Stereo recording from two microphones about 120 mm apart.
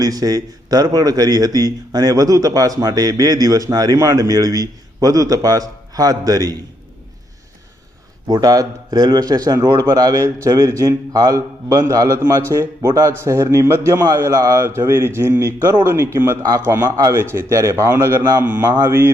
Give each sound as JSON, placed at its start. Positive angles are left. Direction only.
{"t": 0.0, "sound": "speech", "side_deg": -30}
{"t": 8.3, "sound": "a man's voice", "side_deg": -30}